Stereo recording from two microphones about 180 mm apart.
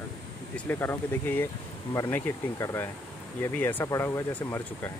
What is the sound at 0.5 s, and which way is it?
Speech, 10° left (ahead or behind).